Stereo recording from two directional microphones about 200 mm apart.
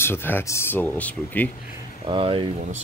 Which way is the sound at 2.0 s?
25° right (ahead or behind).